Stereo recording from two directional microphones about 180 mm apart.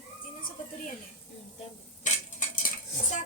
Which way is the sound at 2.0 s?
45° left (ahead or behind).